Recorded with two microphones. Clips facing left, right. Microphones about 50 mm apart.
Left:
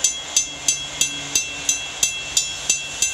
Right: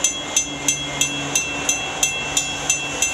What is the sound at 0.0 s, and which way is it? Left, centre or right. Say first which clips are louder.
Vehicle: right 3 dB; right.